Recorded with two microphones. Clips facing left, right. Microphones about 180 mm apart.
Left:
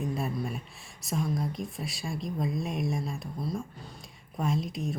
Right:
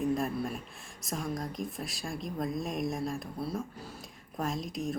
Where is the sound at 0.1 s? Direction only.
Centre (ahead or behind).